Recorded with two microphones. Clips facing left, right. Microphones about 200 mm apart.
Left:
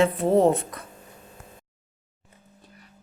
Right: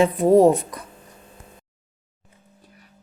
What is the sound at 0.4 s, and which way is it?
Speech, 25° left (ahead or behind).